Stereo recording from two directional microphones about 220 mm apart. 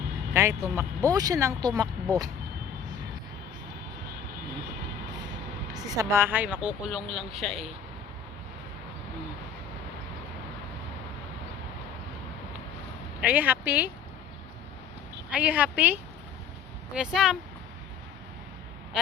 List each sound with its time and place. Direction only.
0.3 s speech: 10° right (ahead or behind)
5.7 s speech: 15° right (ahead or behind)
13.2 s speech: 5° right (ahead or behind)
15.3 s speech: 5° right (ahead or behind)